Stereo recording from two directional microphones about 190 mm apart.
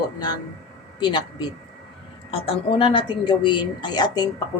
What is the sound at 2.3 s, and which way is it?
Speech, 30° left (ahead or behind).